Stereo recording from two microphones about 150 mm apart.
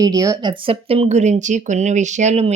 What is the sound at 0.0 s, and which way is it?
Speech, 25° right (ahead or behind).